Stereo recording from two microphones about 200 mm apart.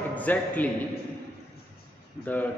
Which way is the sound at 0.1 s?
10° left (ahead or behind).